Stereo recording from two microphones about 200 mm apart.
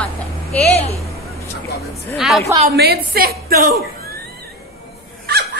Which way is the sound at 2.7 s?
55° right (ahead or behind).